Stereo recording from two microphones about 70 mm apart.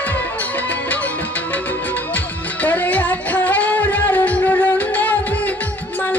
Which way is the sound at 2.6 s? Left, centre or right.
Left.